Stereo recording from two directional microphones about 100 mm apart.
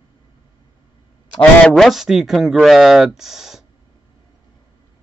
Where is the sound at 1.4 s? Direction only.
10° left (ahead or behind).